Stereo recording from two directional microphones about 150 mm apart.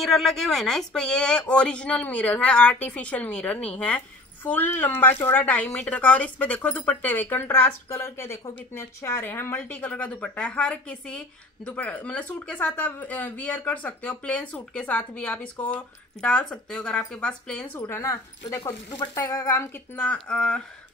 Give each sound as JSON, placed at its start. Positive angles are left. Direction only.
{"t": 0.0, "sound": "a woman's voice", "side_deg": 0}
{"t": 17.7, "sound": "speech", "side_deg": 15}